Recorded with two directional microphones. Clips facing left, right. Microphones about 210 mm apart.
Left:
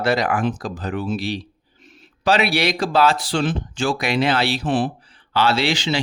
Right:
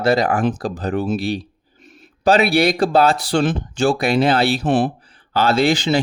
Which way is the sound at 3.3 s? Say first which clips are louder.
Right 4 dB; 45° right (ahead or behind).